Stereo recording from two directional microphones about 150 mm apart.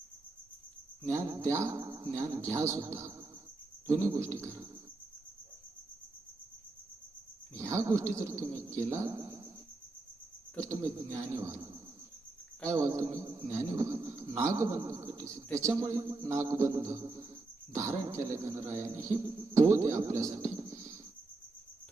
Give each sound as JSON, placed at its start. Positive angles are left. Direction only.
{"t": 1.1, "sound": "speech", "side_deg": -20}
{"t": 7.5, "sound": "speech", "side_deg": -20}
{"t": 10.6, "sound": "speech", "side_deg": -20}
{"t": 12.7, "sound": "speech", "side_deg": -20}